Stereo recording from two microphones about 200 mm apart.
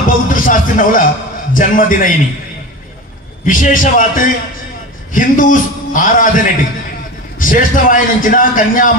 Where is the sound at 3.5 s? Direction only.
40° left (ahead or behind).